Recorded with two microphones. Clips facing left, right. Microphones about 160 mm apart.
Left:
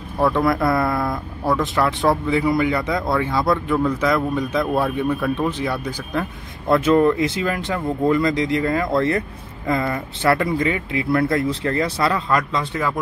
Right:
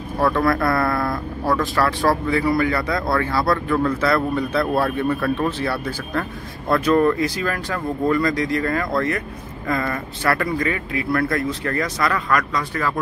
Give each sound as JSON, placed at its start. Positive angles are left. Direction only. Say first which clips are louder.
{"t": 0.2, "sound": "speech", "louder": "left 1 dB", "side_deg": 20}